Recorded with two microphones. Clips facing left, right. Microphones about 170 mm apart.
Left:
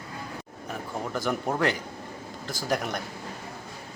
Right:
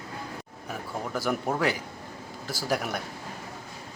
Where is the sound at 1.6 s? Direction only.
5° right (ahead or behind).